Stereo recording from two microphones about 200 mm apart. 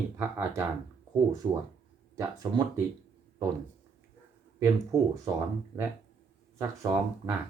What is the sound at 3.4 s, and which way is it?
Speech, 15° right (ahead or behind).